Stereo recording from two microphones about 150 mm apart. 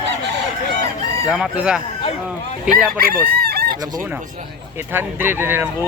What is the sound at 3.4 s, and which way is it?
Chicken, 90° right.